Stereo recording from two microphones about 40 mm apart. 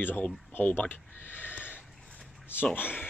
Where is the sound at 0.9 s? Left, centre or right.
Left.